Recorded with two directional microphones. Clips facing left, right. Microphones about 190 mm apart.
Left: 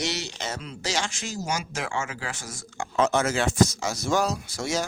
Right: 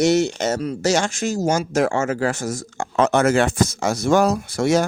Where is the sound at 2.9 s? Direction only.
60° right (ahead or behind).